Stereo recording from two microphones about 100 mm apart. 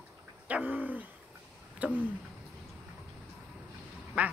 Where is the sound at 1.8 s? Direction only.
15° right (ahead or behind).